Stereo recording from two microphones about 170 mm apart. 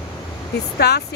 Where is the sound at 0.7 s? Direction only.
75° left (ahead or behind).